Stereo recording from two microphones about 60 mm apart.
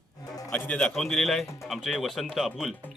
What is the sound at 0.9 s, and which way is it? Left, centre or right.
Speech, centre.